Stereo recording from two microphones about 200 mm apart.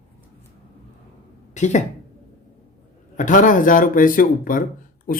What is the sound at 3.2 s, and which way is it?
Speech, 40° left (ahead or behind).